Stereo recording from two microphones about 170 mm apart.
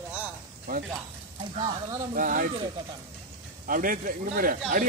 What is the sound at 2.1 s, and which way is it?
Speech, 55° right (ahead or behind).